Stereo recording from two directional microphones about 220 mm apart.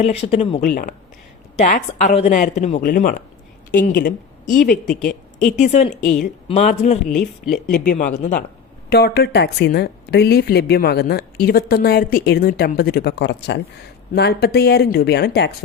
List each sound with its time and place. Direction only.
0.0 s speech: 30° left (ahead or behind)
0.7 s a woman's voice: 40° left (ahead or behind)
7.1 s speech: centre (ahead or behind)
7.7 s speech: 35° left (ahead or behind)
8.9 s a woman's voice: 45° left (ahead or behind)